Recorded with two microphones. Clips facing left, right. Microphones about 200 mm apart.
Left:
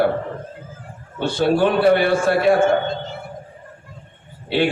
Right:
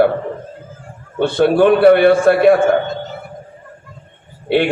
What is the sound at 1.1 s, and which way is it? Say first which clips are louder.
A man's voice: right 5 dB; 55° right (ahead or behind).